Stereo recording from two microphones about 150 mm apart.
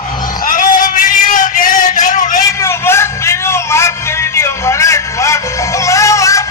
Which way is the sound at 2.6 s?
15° left (ahead or behind).